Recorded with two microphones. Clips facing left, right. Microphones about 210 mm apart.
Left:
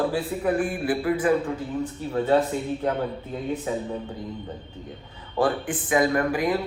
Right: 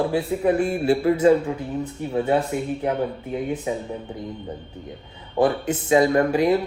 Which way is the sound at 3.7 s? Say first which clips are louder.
Even; 15° right (ahead or behind).